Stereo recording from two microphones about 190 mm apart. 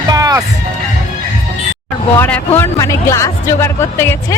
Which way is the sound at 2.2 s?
10° left (ahead or behind).